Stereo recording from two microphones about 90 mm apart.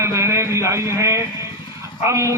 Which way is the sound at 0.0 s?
30° right (ahead or behind).